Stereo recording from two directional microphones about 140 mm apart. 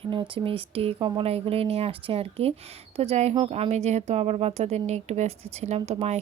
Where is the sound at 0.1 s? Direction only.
40° right (ahead or behind).